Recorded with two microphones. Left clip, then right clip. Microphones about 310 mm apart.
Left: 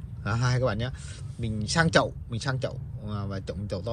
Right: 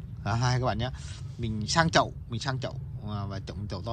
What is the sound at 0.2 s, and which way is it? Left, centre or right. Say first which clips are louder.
Speech: left 1 dB; centre.